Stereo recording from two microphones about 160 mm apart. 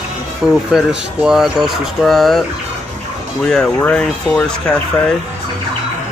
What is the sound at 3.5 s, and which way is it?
Speech, 10° left (ahead or behind).